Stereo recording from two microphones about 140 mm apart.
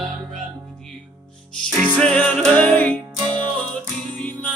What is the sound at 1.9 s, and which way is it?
Music, 10° left (ahead or behind).